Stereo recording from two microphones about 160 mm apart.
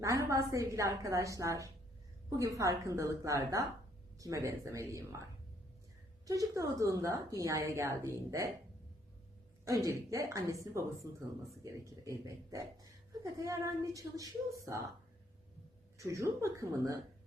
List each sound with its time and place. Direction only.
0.0 s a woman's voice: 20° right (ahead or behind)
6.2 s a woman's voice: 20° right (ahead or behind)
9.6 s a woman's voice: 20° right (ahead or behind)
16.0 s a woman's voice: 20° right (ahead or behind)